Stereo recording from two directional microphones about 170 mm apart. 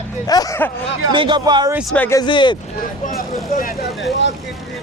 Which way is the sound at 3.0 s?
55° left (ahead or behind).